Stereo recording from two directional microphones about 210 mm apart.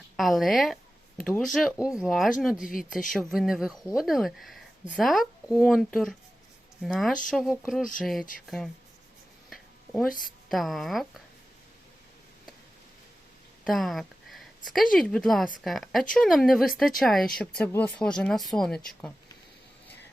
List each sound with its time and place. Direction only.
0.2 s speech: centre (ahead or behind)
10.1 s a woman's voice: 40° left (ahead or behind)
10.5 s speech: centre (ahead or behind)
13.7 s speech: centre (ahead or behind)